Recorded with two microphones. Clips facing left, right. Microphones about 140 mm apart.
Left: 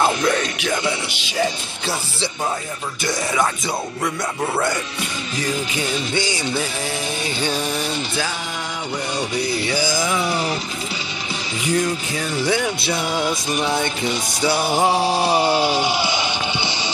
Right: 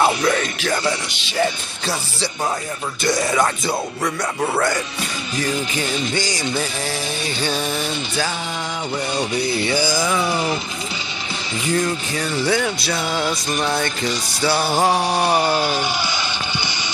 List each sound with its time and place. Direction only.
0.0 s music: 5° right (ahead or behind)
0.6 s speech: 10° left (ahead or behind)
3.1 s music: centre (ahead or behind)
6.3 s music: 5° left (ahead or behind)
7.3 s speech: 10° left (ahead or behind)
9.7 s speech: 15° left (ahead or behind)
10.1 s music: centre (ahead or behind)
11.6 s speech: 15° left (ahead or behind)
12.9 s music: 15° left (ahead or behind); by 16.9 s 30° left (ahead or behind)